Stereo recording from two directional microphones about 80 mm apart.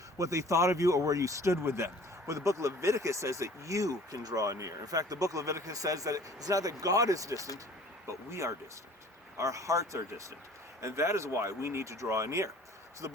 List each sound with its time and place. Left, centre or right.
0.2 s speech: right